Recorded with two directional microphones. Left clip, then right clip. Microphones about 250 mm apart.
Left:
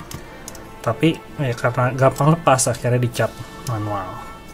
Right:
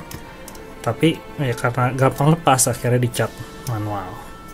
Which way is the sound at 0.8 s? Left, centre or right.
Centre.